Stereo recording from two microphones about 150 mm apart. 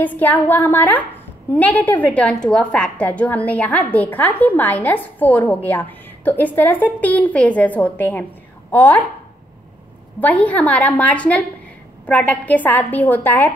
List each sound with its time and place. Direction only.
0.0 s a woman's voice: 10° left (ahead or behind)
10.2 s a woman's voice: 10° left (ahead or behind)